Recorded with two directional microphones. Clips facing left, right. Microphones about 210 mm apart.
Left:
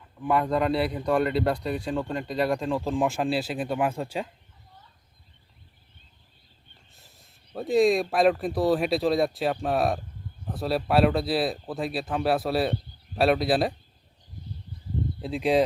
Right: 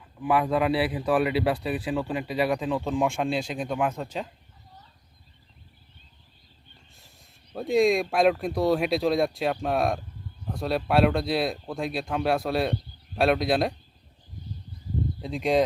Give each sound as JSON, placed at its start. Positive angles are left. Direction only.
{"t": 0.2, "sound": "speech", "side_deg": -5}
{"t": 7.5, "sound": "speech", "side_deg": 0}
{"t": 15.2, "sound": "speech", "side_deg": 0}